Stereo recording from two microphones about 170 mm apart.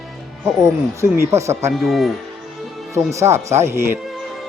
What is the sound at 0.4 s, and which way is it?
Speech, 15° right (ahead or behind).